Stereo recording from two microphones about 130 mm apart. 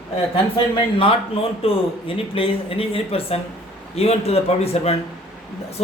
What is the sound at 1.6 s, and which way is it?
Speech, 45° left (ahead or behind).